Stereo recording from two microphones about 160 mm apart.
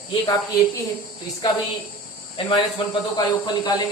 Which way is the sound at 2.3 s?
30° left (ahead or behind).